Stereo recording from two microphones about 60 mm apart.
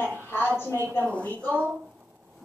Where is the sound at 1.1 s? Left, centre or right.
Left.